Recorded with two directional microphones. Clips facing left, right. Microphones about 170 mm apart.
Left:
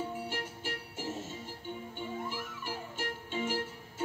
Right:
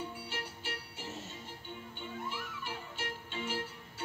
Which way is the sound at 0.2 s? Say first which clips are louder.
Left 5 dB; 50° left (ahead or behind).